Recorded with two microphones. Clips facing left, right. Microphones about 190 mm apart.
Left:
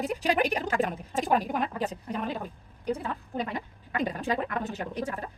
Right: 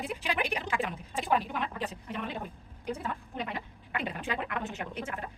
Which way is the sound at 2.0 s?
40° left (ahead or behind).